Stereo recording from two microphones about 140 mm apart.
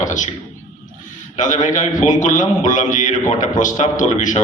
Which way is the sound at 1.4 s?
65° left (ahead or behind).